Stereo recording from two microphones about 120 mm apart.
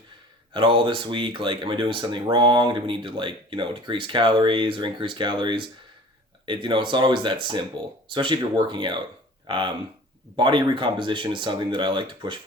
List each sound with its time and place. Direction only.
0.5 s speech: 40° right (ahead or behind)